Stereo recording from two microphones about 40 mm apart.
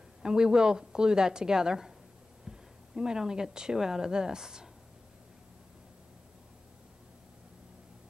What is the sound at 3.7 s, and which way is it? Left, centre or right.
Speech, centre.